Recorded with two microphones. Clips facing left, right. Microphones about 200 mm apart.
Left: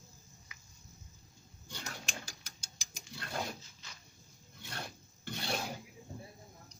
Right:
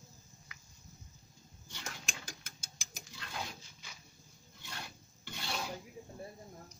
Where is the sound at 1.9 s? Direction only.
50° right (ahead or behind).